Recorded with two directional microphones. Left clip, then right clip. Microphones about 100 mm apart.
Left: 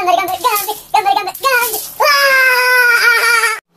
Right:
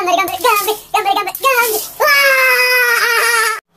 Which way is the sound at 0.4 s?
5° right (ahead or behind).